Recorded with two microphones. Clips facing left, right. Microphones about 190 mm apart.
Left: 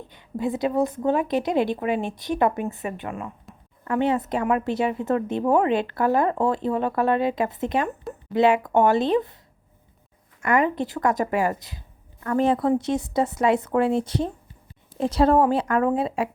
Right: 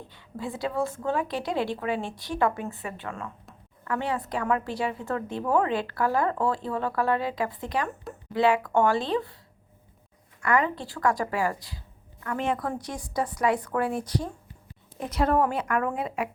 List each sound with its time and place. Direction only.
0.1 s speech: 20° left (ahead or behind)
10.4 s speech: 20° left (ahead or behind)
12.2 s speech: 35° left (ahead or behind)